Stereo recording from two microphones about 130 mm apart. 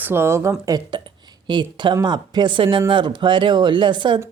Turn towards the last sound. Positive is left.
turn(degrees=-40)  # may be behind; listen again after turning